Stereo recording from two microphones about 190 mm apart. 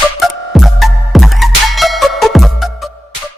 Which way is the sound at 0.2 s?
Centre (ahead or behind).